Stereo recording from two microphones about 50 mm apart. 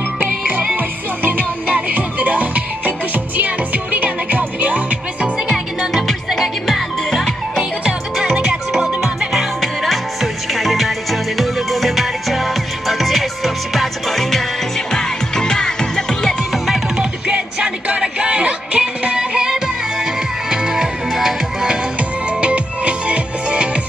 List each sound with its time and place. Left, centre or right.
0.7 s music: right
5.5 s music: centre
7.8 s music: centre
16.5 s music: centre
17.0 s music: centre
22.4 s music: right